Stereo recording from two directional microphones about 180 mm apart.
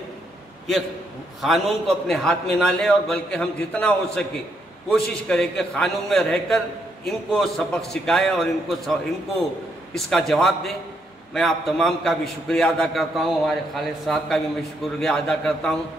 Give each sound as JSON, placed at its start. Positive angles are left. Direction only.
{"t": 1.4, "sound": "a man's voice", "side_deg": 0}
{"t": 9.9, "sound": "a man's voice", "side_deg": 0}